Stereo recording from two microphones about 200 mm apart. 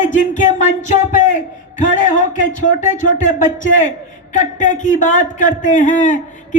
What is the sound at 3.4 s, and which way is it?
A man's voice, 40° left (ahead or behind).